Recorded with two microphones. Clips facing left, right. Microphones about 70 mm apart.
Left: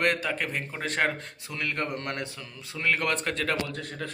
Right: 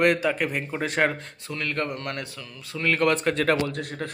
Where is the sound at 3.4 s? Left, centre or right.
Right.